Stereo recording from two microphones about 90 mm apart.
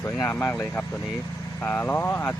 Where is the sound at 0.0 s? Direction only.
30° left (ahead or behind).